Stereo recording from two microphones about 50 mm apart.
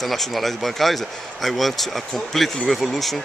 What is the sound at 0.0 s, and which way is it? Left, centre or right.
Speech, centre.